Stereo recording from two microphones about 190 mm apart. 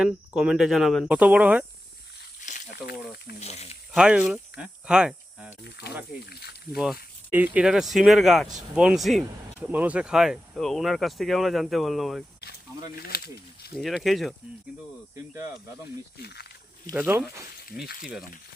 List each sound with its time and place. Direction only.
0.0 s speech: 5° right (ahead or behind)
2.4 s a sound: 40° left (ahead or behind)
3.4 s speech: 35° left (ahead or behind)
3.9 s speech: 5° right (ahead or behind)
5.6 s speech: 60° left (ahead or behind)
7.3 s speech: 10° right (ahead or behind)
13.0 s speech: 55° left (ahead or behind)
13.7 s speech: centre (ahead or behind)
16.2 s wild animals: 60° left (ahead or behind)
16.9 s speech: 10° right (ahead or behind)
18.0 s speech: centre (ahead or behind)